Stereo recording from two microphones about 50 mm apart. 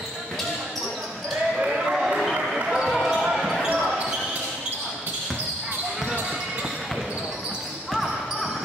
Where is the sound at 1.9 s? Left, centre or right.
Centre.